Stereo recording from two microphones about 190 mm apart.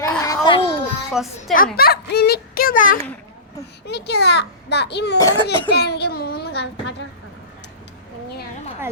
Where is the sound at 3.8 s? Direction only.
60° left (ahead or behind).